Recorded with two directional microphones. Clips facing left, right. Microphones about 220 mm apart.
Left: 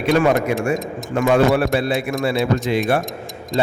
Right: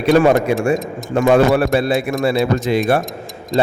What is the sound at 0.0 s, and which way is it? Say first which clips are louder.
Speech: right 4 dB; 40° right (ahead or behind).